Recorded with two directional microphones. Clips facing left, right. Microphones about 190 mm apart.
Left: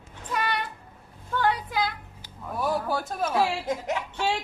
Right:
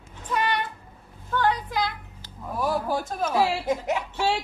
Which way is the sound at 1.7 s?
5° left (ahead or behind).